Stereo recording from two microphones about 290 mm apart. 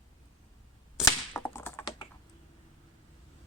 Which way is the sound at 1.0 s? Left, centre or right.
Centre.